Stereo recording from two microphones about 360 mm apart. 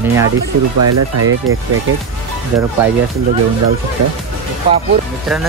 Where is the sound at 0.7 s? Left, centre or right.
Right.